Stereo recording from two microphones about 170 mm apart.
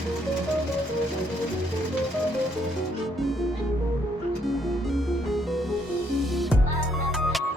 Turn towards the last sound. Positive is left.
turn(degrees=0)  # may be behind; listen again after turning